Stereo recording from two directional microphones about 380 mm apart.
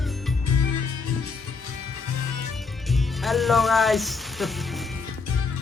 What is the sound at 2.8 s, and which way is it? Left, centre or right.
Music, centre.